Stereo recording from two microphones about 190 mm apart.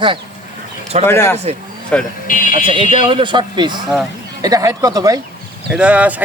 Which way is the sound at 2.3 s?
45° left (ahead or behind).